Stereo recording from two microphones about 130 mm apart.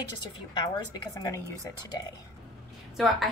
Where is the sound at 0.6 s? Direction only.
30° left (ahead or behind).